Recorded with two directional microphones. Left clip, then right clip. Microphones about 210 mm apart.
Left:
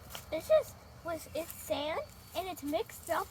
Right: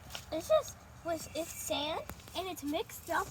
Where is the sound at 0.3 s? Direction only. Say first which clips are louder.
Left 2 dB; 50° left (ahead or behind).